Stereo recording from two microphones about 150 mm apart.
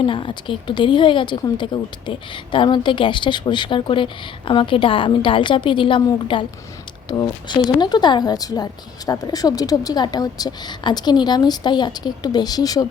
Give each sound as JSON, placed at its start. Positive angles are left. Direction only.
{"t": 0.0, "sound": "a woman's voice", "side_deg": 35}